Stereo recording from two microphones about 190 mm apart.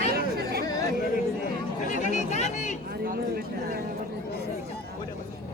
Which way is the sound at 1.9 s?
40° left (ahead or behind).